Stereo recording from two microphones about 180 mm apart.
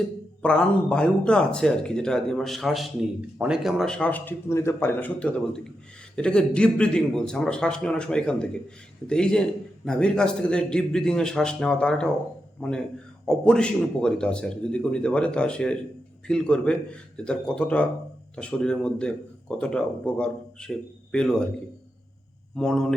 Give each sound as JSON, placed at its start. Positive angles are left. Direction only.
{"t": 0.4, "sound": "a man's voice", "side_deg": 5}
{"t": 22.5, "sound": "speech", "side_deg": 5}